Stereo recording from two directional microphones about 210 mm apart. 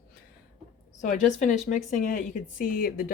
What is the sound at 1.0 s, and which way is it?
A woman's voice, 35° left (ahead or behind).